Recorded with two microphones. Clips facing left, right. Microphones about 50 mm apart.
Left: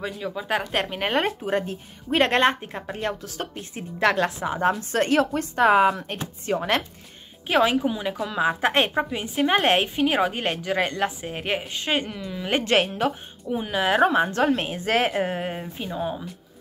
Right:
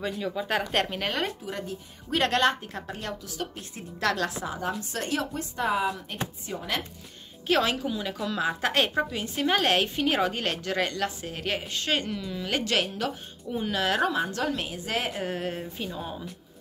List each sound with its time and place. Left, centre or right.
0.0 s speech: centre
1.0 s a woman's voice: left
7.4 s a woman's voice: centre
12.4 s a woman's voice: left
14.0 s a woman's voice: left
15.2 s a woman's voice: left